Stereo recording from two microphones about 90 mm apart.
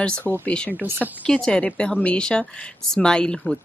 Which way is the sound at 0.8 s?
25° right (ahead or behind).